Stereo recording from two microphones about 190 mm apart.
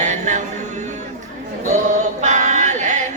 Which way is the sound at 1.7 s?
40° right (ahead or behind).